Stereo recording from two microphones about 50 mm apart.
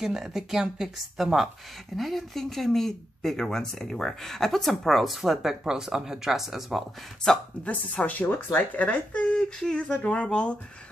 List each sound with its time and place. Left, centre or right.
0.0 s speech: centre
7.6 s speech: left
9.4 s speech: centre